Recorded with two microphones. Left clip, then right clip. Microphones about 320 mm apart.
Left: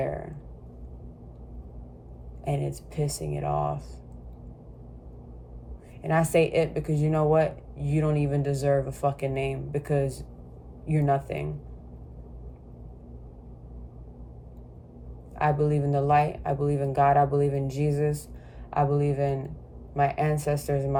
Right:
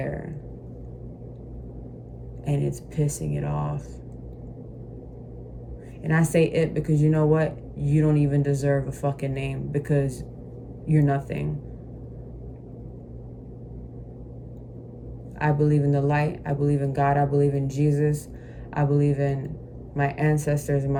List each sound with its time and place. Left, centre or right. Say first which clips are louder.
2.4 s speech: right 2 dB; centre
6.0 s speech: even; centre
15.4 s speech: right 1 dB; centre